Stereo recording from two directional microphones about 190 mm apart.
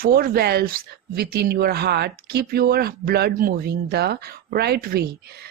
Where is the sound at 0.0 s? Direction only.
50° right (ahead or behind).